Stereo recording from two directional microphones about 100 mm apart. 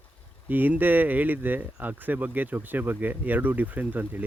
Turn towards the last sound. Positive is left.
turn(degrees=-20)  # may be behind; listen again after turning